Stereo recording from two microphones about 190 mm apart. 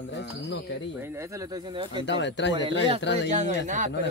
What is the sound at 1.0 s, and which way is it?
Speech, 15° right (ahead or behind).